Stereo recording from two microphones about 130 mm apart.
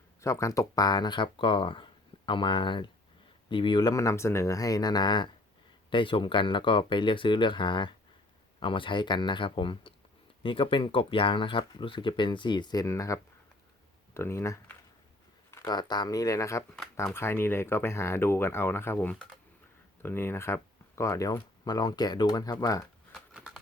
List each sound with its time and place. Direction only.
0.2 s speech: 25° left (ahead or behind)
16.7 s speech: centre (ahead or behind)
17.2 s speech: 20° left (ahead or behind)
23.1 s a sound: 5° right (ahead or behind)